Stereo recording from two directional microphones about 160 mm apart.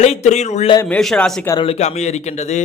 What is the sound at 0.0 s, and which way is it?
Speech, 45° left (ahead or behind).